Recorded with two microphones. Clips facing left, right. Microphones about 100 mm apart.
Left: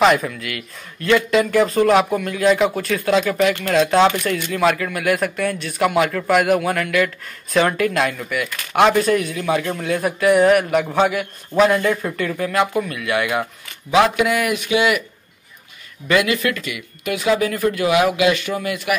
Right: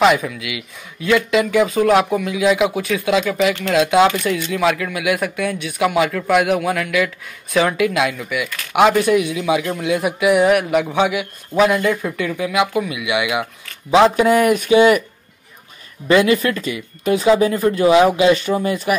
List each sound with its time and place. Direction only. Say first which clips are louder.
0.0 s speech: right 1 dB; centre (ahead or behind)
13.8 s speech: right 3 dB; 30° right (ahead or behind)
16.1 s speech: right 4 dB; 30° right (ahead or behind)